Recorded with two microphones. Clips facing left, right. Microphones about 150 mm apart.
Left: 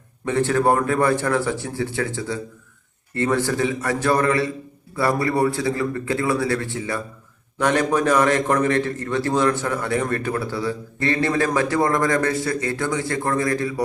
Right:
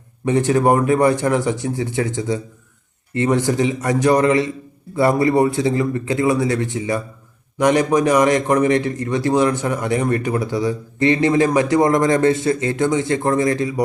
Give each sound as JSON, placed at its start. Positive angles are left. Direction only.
{"t": 0.3, "sound": "a man's voice", "side_deg": -15}